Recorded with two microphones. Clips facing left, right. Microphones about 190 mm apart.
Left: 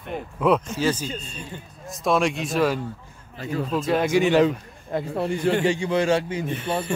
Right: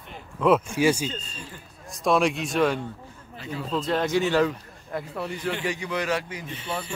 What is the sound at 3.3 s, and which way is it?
Speech, 45° left (ahead or behind).